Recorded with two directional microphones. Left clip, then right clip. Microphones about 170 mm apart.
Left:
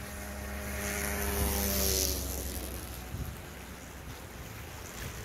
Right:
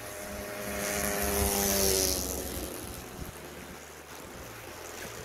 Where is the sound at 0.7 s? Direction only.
45° right (ahead or behind); by 1.9 s 70° right (ahead or behind).